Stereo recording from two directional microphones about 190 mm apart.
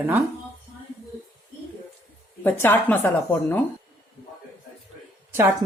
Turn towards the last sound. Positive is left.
turn(degrees=-15)  # may be behind; listen again after turning